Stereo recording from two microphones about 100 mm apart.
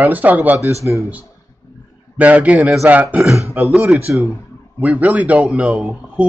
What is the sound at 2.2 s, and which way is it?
Speech, 15° right (ahead or behind).